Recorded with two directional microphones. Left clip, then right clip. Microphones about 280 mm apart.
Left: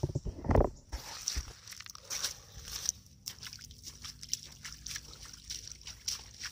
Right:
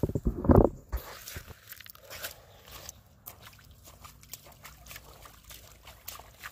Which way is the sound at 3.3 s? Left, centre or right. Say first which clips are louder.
Left 6 dB; left.